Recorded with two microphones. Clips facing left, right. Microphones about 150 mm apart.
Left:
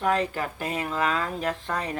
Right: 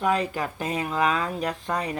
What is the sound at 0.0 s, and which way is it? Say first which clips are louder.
Speech: right 1 dB; 15° right (ahead or behind).